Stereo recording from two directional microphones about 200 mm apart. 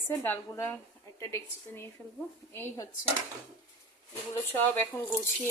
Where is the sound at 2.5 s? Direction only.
15° left (ahead or behind).